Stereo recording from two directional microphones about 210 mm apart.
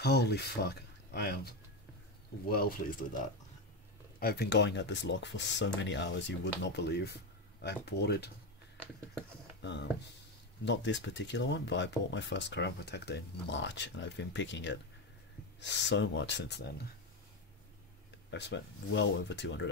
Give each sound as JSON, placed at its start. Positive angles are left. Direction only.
{"t": 0.0, "sound": "speech", "side_deg": 50}
{"t": 4.2, "sound": "speech", "side_deg": 50}
{"t": 9.6, "sound": "speech", "side_deg": 55}
{"t": 18.3, "sound": "speech", "side_deg": 55}